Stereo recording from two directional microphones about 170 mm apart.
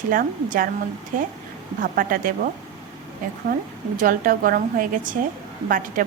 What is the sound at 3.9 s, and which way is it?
A woman's voice, 55° right (ahead or behind).